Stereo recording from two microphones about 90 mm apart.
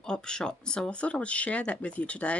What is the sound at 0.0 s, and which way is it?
Speech, 10° left (ahead or behind).